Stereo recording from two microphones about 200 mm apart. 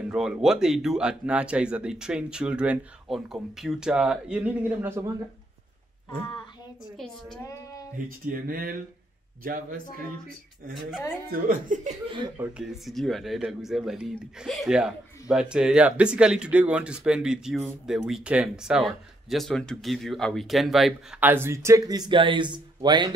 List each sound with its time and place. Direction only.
0.1 s speech: 5° right (ahead or behind)
8.3 s speech: 45° right (ahead or behind)
11.3 s speech: 45° right (ahead or behind)
12.4 s speech: 5° right (ahead or behind); by 23.1 s 20° right (ahead or behind)